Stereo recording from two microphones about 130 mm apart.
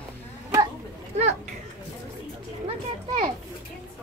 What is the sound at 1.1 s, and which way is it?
Speech, 55° right (ahead or behind).